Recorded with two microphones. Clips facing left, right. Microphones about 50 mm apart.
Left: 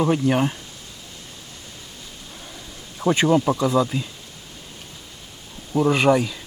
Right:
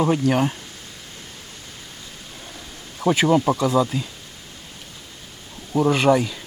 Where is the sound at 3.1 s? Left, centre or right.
Centre.